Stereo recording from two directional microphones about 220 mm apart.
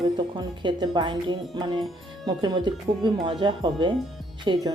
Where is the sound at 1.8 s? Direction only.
Centre (ahead or behind).